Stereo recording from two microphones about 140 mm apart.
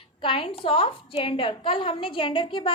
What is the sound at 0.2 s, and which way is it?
A woman's voice, 40° left (ahead or behind).